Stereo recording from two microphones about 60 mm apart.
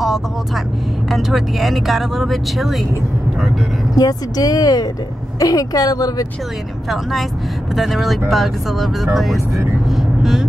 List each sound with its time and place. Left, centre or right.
1.1 s speech: centre
3.9 s speech: left
6.9 s speech: centre
9.8 s vehicle: centre